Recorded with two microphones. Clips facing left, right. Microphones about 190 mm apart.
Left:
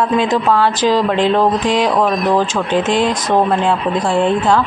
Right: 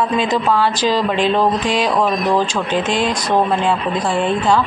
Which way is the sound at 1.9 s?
Centre (ahead or behind).